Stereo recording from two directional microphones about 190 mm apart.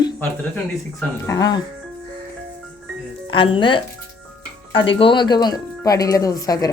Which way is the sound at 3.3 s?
25° left (ahead or behind).